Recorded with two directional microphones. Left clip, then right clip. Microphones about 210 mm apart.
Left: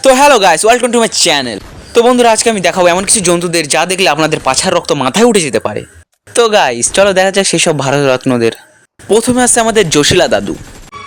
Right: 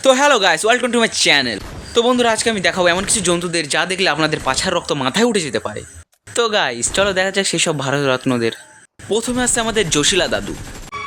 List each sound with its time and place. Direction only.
0.0 s speech: 35° left (ahead or behind)